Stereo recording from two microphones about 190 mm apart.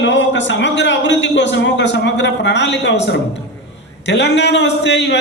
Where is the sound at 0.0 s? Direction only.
75° left (ahead or behind).